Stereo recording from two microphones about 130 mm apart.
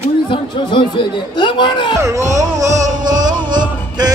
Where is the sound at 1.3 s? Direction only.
35° left (ahead or behind).